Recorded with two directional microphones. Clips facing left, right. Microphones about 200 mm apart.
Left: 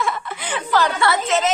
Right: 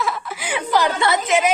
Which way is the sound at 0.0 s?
Centre (ahead or behind).